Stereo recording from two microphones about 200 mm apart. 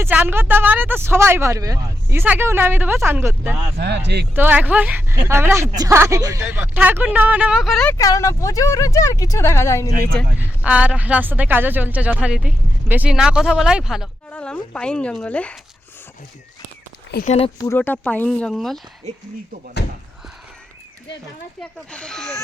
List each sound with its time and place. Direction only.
0.0 s speech: 10° right (ahead or behind)
3.8 s speech: 55° right (ahead or behind)
4.4 s speech: 10° right (ahead or behind)
7.9 s speech: 15° left (ahead or behind)
10.3 s speech: 5° right (ahead or behind)
17.2 s speech: 30° left (ahead or behind)
17.7 s speech: 10° left (ahead or behind)
21.6 s speech: 5° left (ahead or behind)